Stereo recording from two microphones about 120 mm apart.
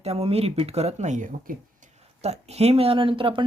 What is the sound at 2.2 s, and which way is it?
Speech, 65° right (ahead or behind).